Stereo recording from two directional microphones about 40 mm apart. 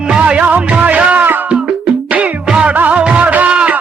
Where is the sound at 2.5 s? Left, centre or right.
Right.